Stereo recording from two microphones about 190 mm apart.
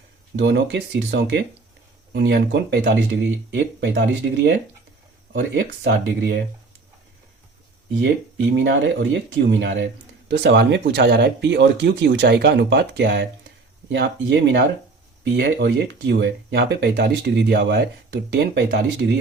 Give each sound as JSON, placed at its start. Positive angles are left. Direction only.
{"t": 0.3, "sound": "speech", "side_deg": -65}
{"t": 8.5, "sound": "speech", "side_deg": -65}
{"t": 9.5, "sound": "speech", "side_deg": -75}